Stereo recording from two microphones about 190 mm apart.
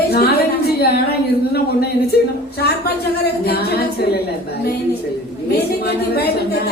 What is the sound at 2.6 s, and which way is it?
A woman's voice, 55° left (ahead or behind).